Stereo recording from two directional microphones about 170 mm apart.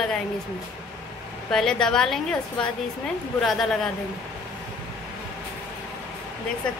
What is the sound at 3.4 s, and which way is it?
Speech, centre (ahead or behind).